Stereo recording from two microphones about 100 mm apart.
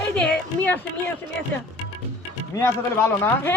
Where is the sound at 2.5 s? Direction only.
25° left (ahead or behind).